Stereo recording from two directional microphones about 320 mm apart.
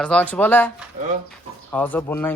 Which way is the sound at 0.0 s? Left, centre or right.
Centre.